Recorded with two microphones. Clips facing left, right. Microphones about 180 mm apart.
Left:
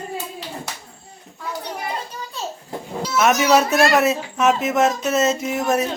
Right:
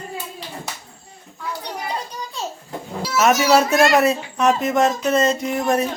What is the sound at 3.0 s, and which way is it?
Speech, 5° right (ahead or behind).